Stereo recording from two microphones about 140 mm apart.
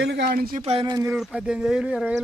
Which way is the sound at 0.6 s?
40° right (ahead or behind).